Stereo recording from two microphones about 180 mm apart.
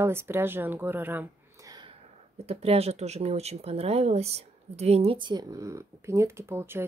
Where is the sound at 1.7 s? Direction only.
25° right (ahead or behind).